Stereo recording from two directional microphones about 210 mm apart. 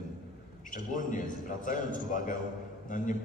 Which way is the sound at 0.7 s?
40° left (ahead or behind).